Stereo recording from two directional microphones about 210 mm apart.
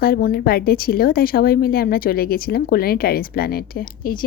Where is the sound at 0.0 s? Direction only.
45° left (ahead or behind).